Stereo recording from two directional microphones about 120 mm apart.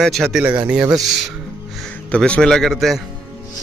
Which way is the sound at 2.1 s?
10° left (ahead or behind).